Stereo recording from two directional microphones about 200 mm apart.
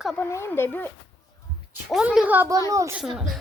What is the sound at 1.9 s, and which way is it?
A woman's voice, 5° right (ahead or behind).